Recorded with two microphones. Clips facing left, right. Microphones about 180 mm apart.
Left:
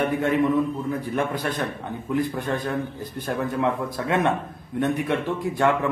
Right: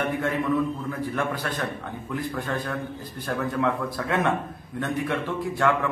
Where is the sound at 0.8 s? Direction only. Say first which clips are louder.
Left 2 dB; 20° left (ahead or behind).